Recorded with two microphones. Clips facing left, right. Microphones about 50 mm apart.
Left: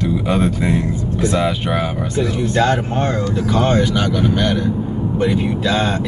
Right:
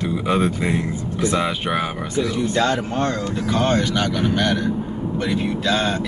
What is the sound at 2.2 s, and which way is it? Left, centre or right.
Speech, left.